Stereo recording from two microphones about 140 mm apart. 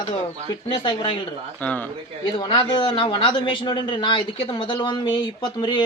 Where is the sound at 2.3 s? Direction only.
35° left (ahead or behind).